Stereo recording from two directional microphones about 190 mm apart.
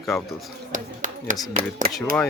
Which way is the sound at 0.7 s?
45° right (ahead or behind).